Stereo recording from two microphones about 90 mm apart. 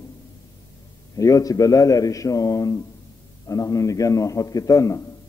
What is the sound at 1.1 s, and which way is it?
A man's voice, 40° left (ahead or behind).